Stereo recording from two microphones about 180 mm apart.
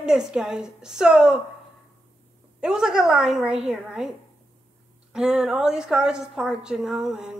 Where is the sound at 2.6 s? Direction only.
5° right (ahead or behind).